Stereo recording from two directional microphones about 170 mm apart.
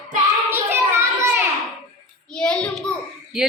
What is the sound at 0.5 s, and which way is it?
Children playing, 15° right (ahead or behind).